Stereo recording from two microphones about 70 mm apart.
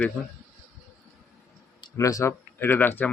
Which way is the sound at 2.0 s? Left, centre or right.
Left.